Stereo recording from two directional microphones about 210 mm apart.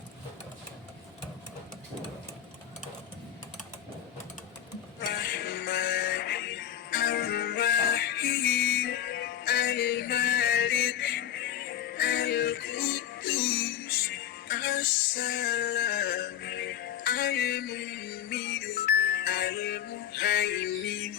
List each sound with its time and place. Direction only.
4.9 s music: 50° left (ahead or behind)